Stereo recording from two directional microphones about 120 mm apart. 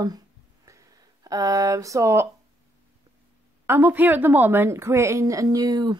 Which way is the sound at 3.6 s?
20° right (ahead or behind).